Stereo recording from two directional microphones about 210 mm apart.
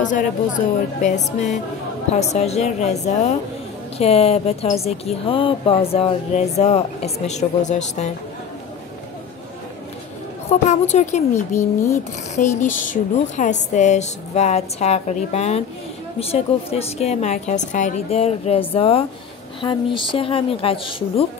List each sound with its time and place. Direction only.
1.0 s a woman's voice: 35° left (ahead or behind)
10.5 s a woman's voice: 30° left (ahead or behind)
11.5 s speech: 15° left (ahead or behind)
12.4 s a woman's voice: 40° left (ahead or behind)